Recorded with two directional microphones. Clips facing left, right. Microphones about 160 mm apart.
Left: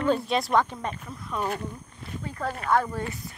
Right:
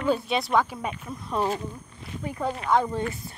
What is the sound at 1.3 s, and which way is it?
Speech, 30° right (ahead or behind).